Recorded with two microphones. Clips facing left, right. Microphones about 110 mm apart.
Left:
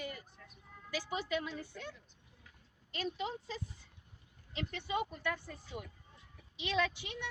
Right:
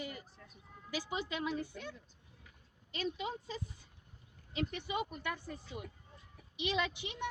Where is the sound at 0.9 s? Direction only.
15° right (ahead or behind).